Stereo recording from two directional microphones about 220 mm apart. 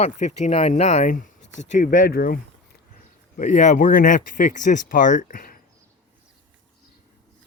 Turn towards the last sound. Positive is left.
turn(degrees=40)  # may be behind; listen again after turning